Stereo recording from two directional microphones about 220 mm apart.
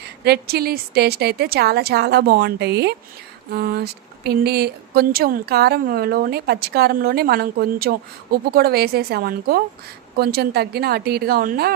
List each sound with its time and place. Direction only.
0.3 s speech: 45° right (ahead or behind)